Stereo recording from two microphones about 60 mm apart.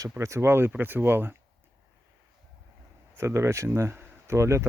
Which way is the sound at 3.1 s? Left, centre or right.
Right.